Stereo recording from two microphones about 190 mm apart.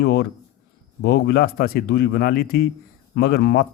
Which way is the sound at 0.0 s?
60° left (ahead or behind).